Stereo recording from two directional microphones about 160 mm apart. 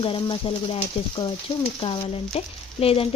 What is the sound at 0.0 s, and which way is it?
Speech, 35° left (ahead or behind).